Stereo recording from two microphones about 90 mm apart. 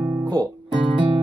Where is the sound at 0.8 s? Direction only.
65° right (ahead or behind).